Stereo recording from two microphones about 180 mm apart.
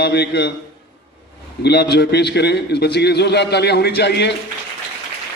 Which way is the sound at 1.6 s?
65° left (ahead or behind).